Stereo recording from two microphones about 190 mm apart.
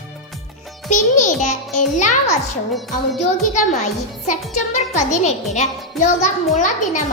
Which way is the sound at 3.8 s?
40° left (ahead or behind).